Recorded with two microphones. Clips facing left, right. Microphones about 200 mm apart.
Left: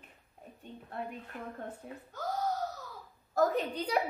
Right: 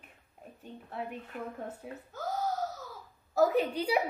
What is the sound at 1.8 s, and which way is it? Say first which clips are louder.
Speech: right 2 dB; 5° right (ahead or behind).